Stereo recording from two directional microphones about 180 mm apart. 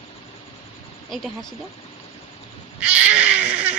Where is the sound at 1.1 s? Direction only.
Centre (ahead or behind).